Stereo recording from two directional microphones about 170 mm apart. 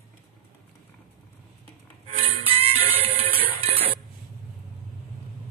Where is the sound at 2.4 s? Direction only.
35° right (ahead or behind).